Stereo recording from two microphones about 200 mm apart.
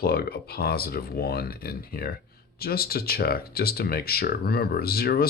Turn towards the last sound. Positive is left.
turn(degrees=50)  # may be behind; listen again after turning